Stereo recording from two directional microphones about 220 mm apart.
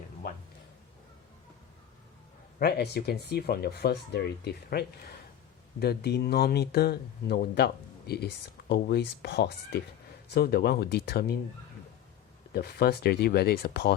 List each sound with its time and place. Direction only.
2.6 s speech: 45° left (ahead or behind)
12.5 s speech: 45° left (ahead or behind)